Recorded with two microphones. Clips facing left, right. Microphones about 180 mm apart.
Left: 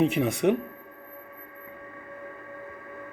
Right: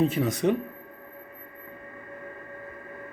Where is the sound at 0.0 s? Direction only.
20° left (ahead or behind).